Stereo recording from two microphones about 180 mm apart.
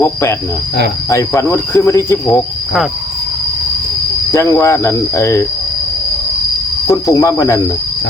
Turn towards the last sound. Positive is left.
turn(degrees=15)  # may be behind; listen again after turning